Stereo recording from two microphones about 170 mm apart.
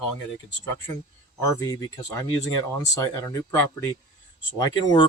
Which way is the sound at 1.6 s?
20° left (ahead or behind).